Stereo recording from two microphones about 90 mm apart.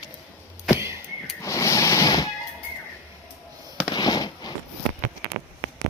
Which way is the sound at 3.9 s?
50° left (ahead or behind).